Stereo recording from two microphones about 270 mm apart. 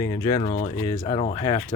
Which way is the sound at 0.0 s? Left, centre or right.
Centre.